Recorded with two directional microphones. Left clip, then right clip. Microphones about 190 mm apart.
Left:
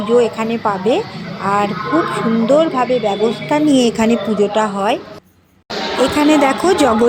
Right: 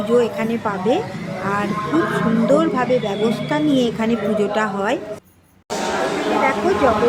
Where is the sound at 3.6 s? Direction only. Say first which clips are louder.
Left 6 dB; 30° left (ahead or behind).